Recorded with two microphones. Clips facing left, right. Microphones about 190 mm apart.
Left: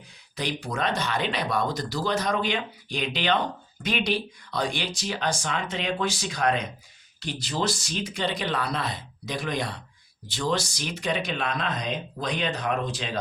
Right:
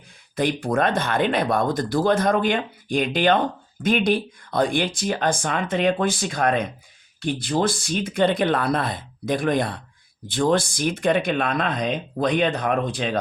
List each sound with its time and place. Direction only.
0.3 s speech: 50° right (ahead or behind)